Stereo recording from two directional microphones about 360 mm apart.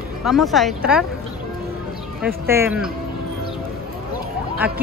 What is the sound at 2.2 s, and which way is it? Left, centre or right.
Speech, centre.